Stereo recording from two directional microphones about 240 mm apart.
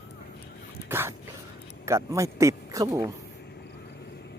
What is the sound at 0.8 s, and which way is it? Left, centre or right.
Dog, centre.